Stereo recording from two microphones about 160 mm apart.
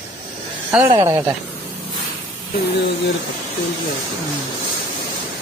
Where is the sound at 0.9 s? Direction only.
20° right (ahead or behind).